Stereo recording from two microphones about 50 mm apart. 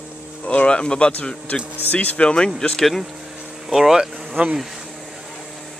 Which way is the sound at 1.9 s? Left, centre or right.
Left.